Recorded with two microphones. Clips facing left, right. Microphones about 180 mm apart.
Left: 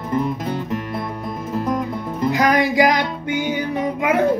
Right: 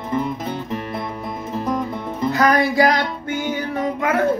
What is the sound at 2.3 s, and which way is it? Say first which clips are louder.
Music: even; 15° left (ahead or behind).